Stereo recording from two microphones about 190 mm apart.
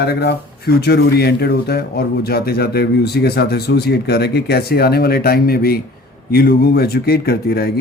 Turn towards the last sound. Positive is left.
turn(degrees=55)  # may be behind; listen again after turning